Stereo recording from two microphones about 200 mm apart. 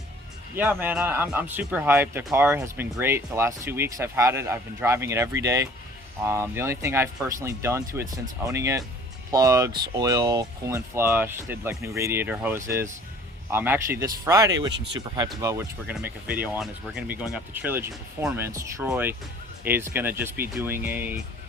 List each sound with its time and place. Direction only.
0.5 s speech: 10° right (ahead or behind)